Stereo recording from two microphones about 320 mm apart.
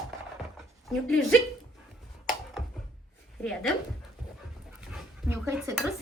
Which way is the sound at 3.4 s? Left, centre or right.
Centre.